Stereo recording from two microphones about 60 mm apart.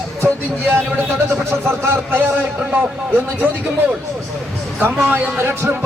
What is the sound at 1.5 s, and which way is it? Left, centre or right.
Speech, right.